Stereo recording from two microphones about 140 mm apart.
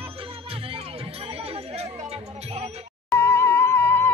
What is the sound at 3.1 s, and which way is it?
Music, 20° left (ahead or behind).